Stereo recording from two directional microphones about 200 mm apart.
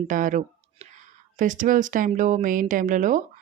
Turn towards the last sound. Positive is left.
turn(degrees=-40)  # may be behind; listen again after turning